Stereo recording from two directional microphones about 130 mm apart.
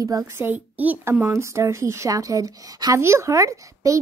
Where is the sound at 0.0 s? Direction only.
25° right (ahead or behind).